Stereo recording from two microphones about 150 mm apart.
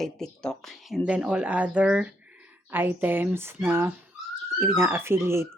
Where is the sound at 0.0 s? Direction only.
5° left (ahead or behind).